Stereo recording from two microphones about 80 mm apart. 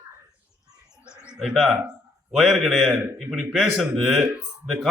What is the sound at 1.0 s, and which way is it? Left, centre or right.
Bird, left.